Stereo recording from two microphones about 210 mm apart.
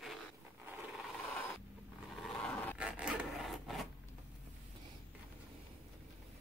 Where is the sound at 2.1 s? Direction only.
Centre (ahead or behind).